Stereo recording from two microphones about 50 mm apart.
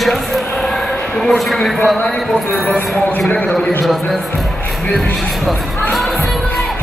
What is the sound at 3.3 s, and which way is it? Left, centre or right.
Speech, left.